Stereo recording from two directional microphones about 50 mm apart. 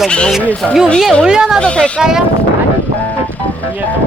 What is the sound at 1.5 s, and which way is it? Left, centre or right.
Speech, centre.